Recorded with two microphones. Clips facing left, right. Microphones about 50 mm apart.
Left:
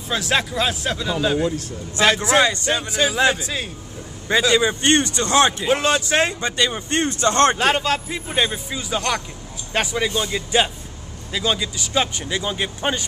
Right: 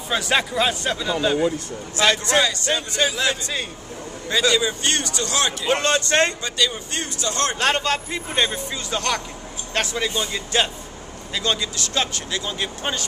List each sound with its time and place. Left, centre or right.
0.1 s speech: centre
4.6 s speech: left
5.7 s speech: centre
6.4 s speech: left
7.5 s speech: centre